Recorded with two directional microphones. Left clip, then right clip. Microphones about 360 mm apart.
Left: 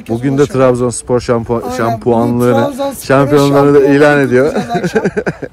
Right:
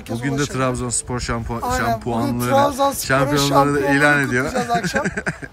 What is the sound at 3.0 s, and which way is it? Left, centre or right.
Speech, centre.